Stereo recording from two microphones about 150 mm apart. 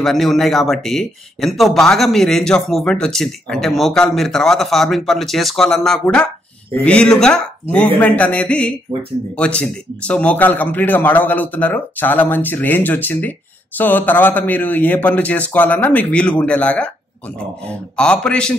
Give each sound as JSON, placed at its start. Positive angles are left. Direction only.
{"t": 0.0, "sound": "a man's voice", "side_deg": 0}
{"t": 17.9, "sound": "speech", "side_deg": 5}